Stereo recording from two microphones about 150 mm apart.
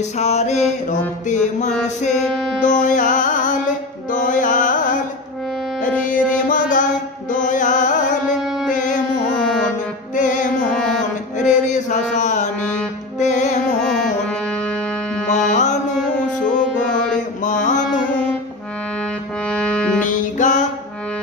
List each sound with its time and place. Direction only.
0.2 s mantra: 45° left (ahead or behind)
2.6 s music: 55° left (ahead or behind)
8.4 s music: 5° right (ahead or behind)
8.7 s music: 60° left (ahead or behind)
9.3 s music: 5° left (ahead or behind)
10.1 s music: 60° left (ahead or behind)
10.7 s mantra: 5° left (ahead or behind)
11.3 s mantra: 55° left (ahead or behind)
13.2 s music: 55° left (ahead or behind)
13.8 s music: 5° left (ahead or behind)
15.2 s mantra: 55° left (ahead or behind)
16.8 s mantra: 5° left (ahead or behind)
19.4 s music: 5° left (ahead or behind)
20.0 s music: 55° left (ahead or behind)